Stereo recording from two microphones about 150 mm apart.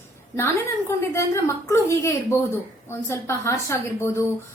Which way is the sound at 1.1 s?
20° left (ahead or behind).